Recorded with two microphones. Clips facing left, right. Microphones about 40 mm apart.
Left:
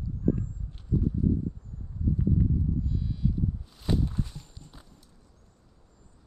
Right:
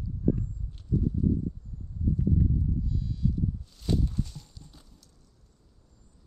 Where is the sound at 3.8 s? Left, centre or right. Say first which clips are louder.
Left 1 dB; centre.